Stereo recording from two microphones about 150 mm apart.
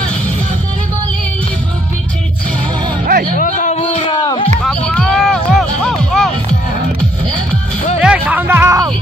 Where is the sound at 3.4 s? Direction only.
55° left (ahead or behind).